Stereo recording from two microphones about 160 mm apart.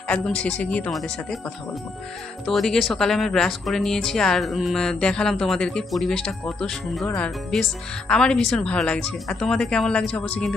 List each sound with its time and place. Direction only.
0.1 s speech: 5° left (ahead or behind)
2.4 s speech: centre (ahead or behind)